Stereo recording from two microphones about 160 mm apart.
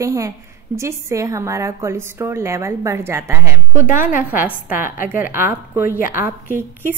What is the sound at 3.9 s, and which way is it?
Speech, 55° left (ahead or behind).